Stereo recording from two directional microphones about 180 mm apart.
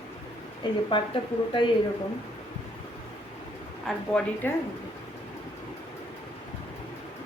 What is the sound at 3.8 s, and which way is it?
Speech, 5° left (ahead or behind).